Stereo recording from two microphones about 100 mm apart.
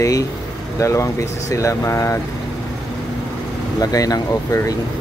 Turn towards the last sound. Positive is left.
turn(degrees=35)  # may be behind; listen again after turning